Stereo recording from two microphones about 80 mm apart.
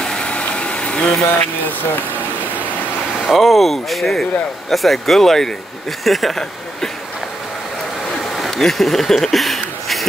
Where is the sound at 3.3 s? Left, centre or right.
Centre.